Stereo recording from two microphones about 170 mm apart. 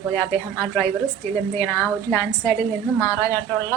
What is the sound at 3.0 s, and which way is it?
Speech, 20° left (ahead or behind).